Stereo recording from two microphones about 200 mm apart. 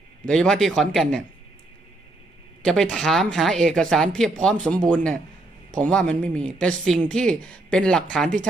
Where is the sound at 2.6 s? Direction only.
5° left (ahead or behind).